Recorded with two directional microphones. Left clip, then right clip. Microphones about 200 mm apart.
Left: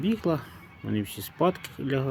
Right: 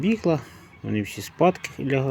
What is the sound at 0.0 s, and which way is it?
Speech, 5° right (ahead or behind).